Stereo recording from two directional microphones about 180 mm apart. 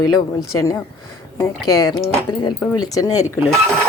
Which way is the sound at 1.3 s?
20° left (ahead or behind).